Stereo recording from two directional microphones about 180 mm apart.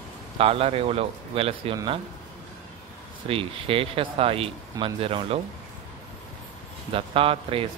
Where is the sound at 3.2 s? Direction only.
30° right (ahead or behind).